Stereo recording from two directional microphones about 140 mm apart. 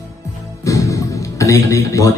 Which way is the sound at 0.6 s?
25° left (ahead or behind).